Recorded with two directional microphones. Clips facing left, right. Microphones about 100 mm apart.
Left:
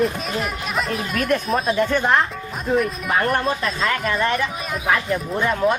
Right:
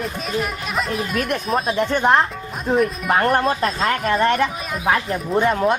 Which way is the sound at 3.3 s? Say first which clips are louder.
Right 3 dB; 40° right (ahead or behind).